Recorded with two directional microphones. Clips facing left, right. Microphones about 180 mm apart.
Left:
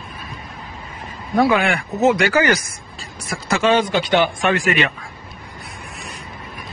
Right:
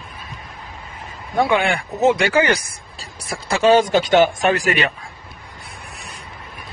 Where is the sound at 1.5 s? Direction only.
30° right (ahead or behind).